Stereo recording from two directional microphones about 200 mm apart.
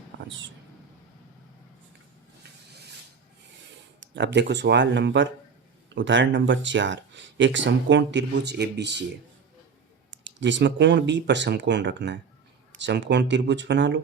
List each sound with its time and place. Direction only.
0.1 s vehicle: 65° right (ahead or behind)
4.1 s speech: 60° right (ahead or behind)
10.1 s speech: 65° right (ahead or behind)